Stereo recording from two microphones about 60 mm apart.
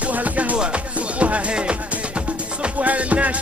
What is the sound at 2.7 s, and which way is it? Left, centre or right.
Music, right.